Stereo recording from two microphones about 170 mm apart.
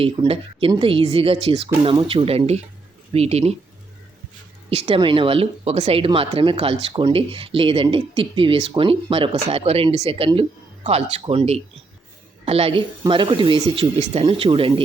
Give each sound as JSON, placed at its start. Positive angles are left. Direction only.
{"t": 0.0, "sound": "speech", "side_deg": -35}
{"t": 4.7, "sound": "speech", "side_deg": -35}